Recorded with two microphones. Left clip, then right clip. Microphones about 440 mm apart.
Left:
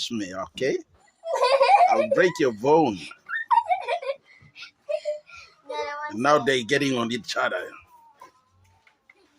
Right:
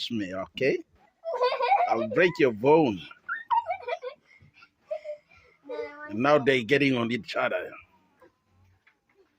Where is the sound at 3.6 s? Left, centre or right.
Right.